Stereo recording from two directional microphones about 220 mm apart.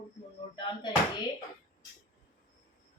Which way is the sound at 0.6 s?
20° left (ahead or behind).